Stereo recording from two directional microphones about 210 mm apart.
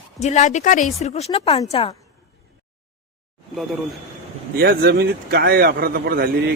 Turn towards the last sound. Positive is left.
turn(degrees=-45)  # may be behind; listen again after turning